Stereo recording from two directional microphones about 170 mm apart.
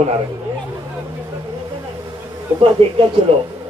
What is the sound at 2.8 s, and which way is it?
Speech, 35° right (ahead or behind).